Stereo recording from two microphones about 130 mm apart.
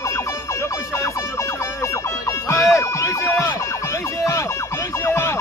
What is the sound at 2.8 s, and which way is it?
Speech, 20° left (ahead or behind).